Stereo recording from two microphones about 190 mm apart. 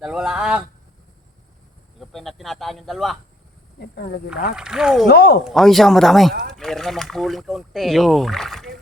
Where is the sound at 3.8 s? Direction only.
55° left (ahead or behind).